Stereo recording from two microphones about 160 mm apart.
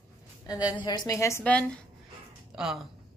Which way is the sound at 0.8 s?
25° left (ahead or behind).